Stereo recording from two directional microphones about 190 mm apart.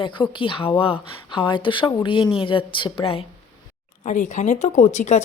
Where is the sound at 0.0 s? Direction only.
25° left (ahead or behind).